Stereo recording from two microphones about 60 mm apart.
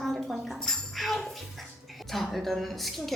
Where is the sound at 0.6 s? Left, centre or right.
Centre.